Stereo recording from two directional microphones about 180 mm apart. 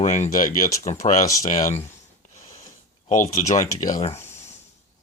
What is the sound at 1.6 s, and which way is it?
Speech, 15° left (ahead or behind).